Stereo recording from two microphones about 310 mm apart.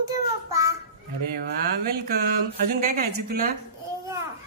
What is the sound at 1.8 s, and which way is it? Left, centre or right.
A woman's voice, right.